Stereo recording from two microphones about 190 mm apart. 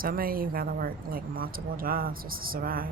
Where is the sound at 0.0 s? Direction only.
50° right (ahead or behind).